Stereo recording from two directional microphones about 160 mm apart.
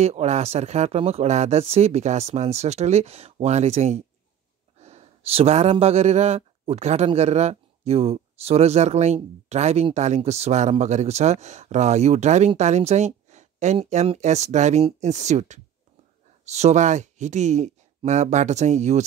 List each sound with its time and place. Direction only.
0.0 s speech: 45° right (ahead or behind)